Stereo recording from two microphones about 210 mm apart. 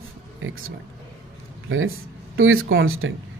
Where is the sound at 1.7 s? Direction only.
75° right (ahead or behind).